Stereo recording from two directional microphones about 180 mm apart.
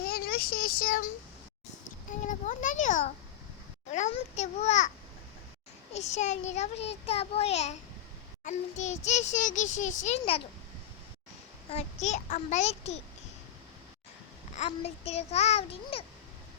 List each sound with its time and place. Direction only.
0.0 s a sound: 60° left (ahead or behind)
2.2 s a sound: 45° left (ahead or behind)
3.9 s a child's voice: 40° left (ahead or behind)
5.9 s a child's voice: 40° left (ahead or behind)
11.7 s a child's voice: 40° left (ahead or behind)
14.5 s a child's voice: 35° left (ahead or behind)